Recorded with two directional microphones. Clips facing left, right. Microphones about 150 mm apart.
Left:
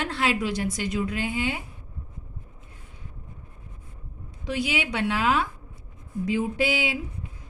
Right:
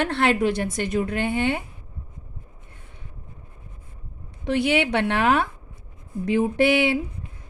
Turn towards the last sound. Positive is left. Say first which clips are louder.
# right 7 dB
turn(degrees=-60)  # may be behind; listen again after turning